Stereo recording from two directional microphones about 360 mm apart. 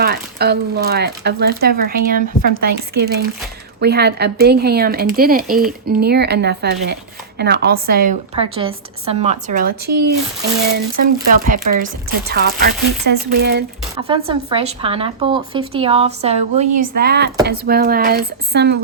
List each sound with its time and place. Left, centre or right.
0.0 s speech: right
13.9 s speech: centre